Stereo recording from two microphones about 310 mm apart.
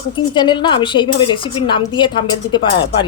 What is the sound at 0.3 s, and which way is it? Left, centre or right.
A woman's voice, centre.